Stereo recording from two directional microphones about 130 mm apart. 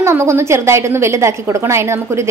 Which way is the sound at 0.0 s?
20° right (ahead or behind).